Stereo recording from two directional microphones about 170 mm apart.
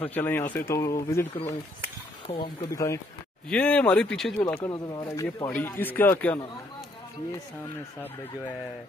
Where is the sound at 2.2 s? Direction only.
30° left (ahead or behind).